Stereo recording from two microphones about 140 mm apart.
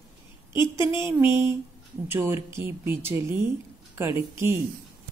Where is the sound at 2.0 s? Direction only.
15° right (ahead or behind).